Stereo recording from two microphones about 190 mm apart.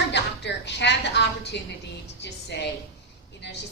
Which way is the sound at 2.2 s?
65° left (ahead or behind).